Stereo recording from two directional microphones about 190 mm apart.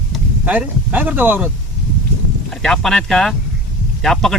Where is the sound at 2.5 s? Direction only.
5° left (ahead or behind).